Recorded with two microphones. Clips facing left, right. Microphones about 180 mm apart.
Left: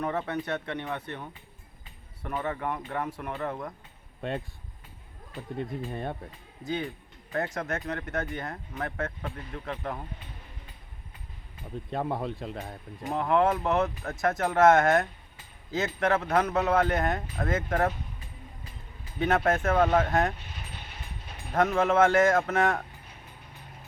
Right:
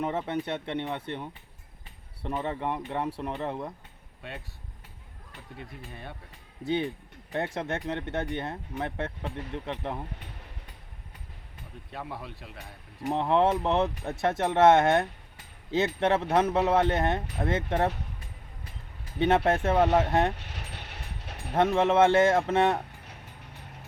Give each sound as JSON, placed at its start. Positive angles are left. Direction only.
{"t": 0.0, "sound": "speech", "side_deg": -25}
{"t": 5.9, "sound": "speech", "side_deg": 50}
{"t": 7.3, "sound": "speech", "side_deg": -25}
{"t": 11.9, "sound": "speech", "side_deg": 50}
{"t": 13.1, "sound": "speech", "side_deg": -25}
{"t": 19.5, "sound": "speech", "side_deg": -25}
{"t": 20.3, "sound": "vehicle", "side_deg": -75}
{"t": 21.5, "sound": "speech", "side_deg": -25}